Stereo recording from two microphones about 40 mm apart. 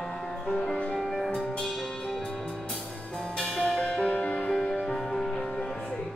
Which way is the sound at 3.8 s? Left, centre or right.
Left.